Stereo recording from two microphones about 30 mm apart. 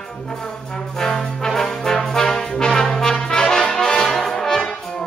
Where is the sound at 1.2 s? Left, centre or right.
Centre.